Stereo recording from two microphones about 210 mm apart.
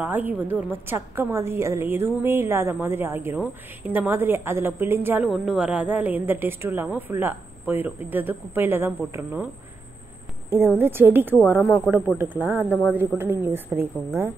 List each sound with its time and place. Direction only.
0.0 s a woman's voice: 10° right (ahead or behind)
10.8 s a woman's voice: 10° right (ahead or behind)